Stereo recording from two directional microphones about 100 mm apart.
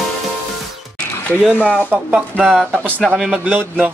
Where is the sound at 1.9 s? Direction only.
15° right (ahead or behind).